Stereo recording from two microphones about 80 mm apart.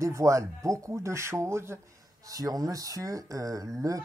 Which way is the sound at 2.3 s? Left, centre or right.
Right.